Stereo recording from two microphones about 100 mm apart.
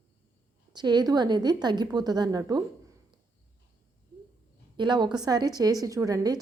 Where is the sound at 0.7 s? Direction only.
45° right (ahead or behind).